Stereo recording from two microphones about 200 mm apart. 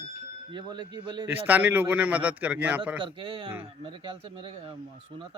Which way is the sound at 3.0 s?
25° right (ahead or behind).